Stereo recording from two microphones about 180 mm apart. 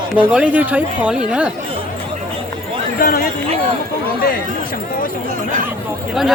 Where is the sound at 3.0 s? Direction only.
55° left (ahead or behind).